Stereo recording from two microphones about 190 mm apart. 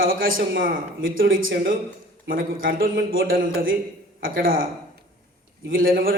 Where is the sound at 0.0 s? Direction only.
50° right (ahead or behind).